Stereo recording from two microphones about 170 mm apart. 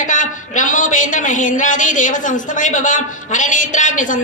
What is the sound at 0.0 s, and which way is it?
Speech, 50° left (ahead or behind).